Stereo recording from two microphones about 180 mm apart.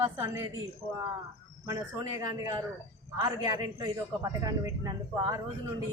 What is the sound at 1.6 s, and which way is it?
A man's voice, 20° right (ahead or behind).